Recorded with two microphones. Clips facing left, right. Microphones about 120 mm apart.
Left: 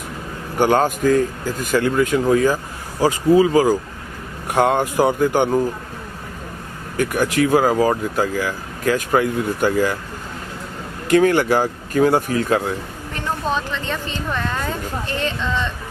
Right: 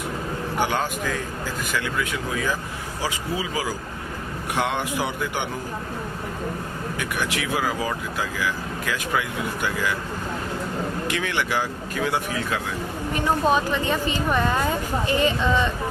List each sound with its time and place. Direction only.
0.6 s speech: 45° left (ahead or behind)
6.9 s speech: 45° left (ahead or behind)
11.1 s speech: 45° left (ahead or behind)
13.1 s speech: 10° right (ahead or behind)